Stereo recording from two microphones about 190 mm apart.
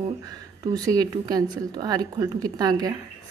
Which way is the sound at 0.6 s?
20° right (ahead or behind).